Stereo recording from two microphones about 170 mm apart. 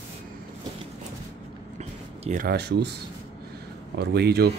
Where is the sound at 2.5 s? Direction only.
75° right (ahead or behind).